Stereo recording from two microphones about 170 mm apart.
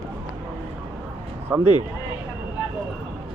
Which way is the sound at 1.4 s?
10° right (ahead or behind).